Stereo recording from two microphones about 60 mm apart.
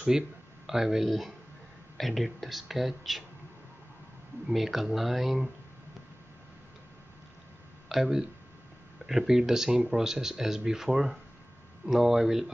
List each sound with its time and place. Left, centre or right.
0.7 s speech: centre
4.5 s speech: centre
7.9 s speech: centre